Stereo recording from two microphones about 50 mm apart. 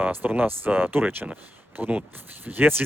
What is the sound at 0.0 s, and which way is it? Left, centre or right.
Speech, right.